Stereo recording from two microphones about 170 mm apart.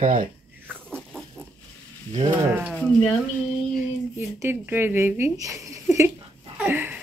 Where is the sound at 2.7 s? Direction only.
5° left (ahead or behind).